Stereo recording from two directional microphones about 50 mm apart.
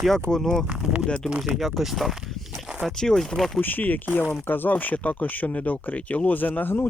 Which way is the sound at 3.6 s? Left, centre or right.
Left.